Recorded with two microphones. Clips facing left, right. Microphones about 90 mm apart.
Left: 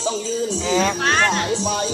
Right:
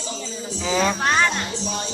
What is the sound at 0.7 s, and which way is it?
Speech, 10° right (ahead or behind).